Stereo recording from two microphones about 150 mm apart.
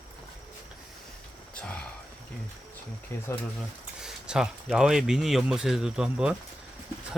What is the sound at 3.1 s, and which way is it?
Speech, 15° left (ahead or behind).